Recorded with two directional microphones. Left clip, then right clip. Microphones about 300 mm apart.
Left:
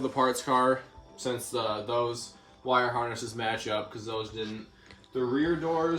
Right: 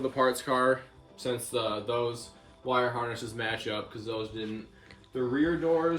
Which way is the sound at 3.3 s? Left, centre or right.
Centre.